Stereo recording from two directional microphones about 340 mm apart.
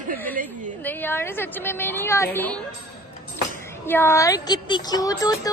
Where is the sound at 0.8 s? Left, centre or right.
Centre.